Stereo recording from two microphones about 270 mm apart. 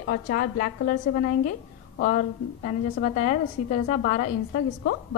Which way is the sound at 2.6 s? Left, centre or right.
Left.